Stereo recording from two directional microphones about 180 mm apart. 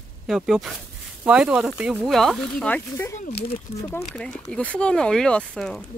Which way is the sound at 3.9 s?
5° left (ahead or behind).